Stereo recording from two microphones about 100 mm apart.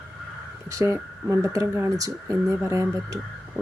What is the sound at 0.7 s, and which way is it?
Speech, 30° right (ahead or behind).